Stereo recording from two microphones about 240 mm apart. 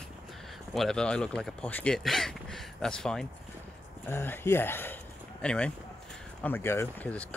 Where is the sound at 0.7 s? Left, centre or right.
Centre.